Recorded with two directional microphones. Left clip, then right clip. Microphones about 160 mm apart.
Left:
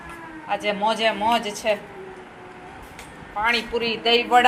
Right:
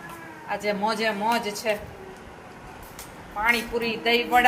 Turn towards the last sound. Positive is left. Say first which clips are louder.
# left 3 dB
turn(degrees=20)  # may be behind; listen again after turning